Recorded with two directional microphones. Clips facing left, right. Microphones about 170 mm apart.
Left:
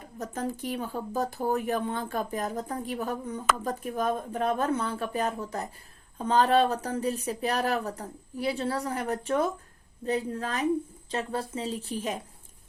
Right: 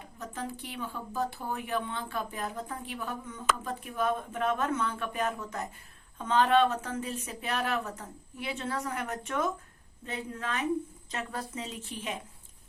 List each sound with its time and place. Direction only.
0.2 s speech: 40° left (ahead or behind)